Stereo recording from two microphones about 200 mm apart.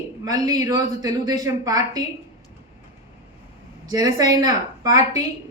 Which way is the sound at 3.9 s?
20° right (ahead or behind).